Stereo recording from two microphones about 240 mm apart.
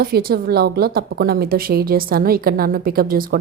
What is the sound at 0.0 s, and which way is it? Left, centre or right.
A woman's voice, right.